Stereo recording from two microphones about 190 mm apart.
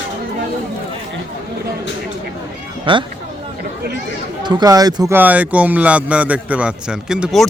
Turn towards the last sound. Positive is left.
turn(degrees=0)  # may be behind; listen again after turning